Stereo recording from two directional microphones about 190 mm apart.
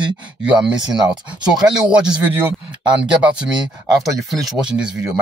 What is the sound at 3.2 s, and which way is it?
Speech, 5° right (ahead or behind).